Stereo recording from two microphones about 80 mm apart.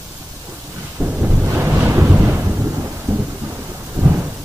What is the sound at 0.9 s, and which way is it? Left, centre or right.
Thunder, centre.